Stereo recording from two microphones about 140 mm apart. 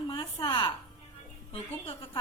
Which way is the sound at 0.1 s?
30° left (ahead or behind).